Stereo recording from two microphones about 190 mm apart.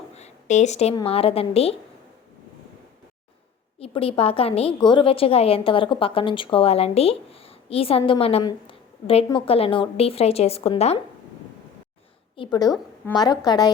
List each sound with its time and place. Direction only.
0.1 s a sound: 35° left (ahead or behind)
0.9 s a woman's voice: 30° left (ahead or behind)
3.8 s a woman's voice: 30° left (ahead or behind)
12.4 s a woman's voice: 20° left (ahead or behind)